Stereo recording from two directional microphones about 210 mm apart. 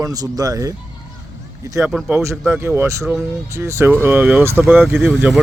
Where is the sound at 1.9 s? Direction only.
5° right (ahead or behind).